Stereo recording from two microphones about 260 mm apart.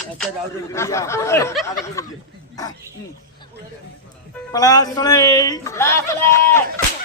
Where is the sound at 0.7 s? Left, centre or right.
Centre.